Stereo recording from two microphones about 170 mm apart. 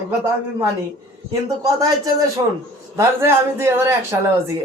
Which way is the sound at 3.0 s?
15° right (ahead or behind).